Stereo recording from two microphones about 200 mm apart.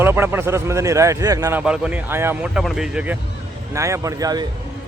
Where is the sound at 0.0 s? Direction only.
10° right (ahead or behind).